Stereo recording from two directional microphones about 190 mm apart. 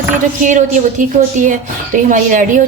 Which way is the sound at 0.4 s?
40° right (ahead or behind).